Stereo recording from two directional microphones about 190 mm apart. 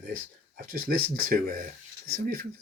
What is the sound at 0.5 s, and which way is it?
Speech, 50° right (ahead or behind).